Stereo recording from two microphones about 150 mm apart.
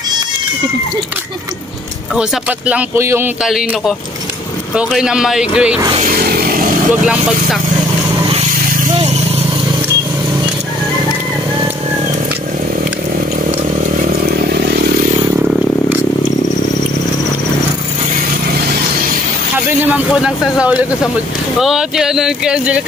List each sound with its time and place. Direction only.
2.1 s a man's voice: 10° right (ahead or behind)
3.4 s speech: centre (ahead or behind)
6.0 s a sound: 85° right
15.3 s vehicle: 10° right (ahead or behind)
19.8 s a man's voice: 5° right (ahead or behind)